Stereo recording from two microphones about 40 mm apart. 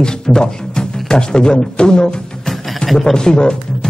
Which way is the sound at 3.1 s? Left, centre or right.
Centre.